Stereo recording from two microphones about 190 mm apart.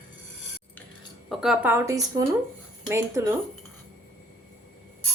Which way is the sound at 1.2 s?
Centre (ahead or behind).